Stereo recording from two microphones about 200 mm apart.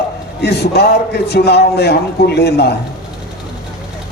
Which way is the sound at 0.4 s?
55° left (ahead or behind).